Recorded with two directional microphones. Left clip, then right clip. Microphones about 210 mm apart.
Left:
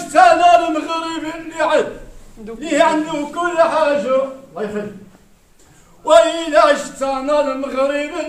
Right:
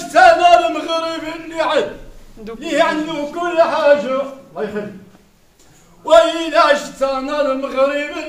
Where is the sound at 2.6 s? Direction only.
Centre (ahead or behind).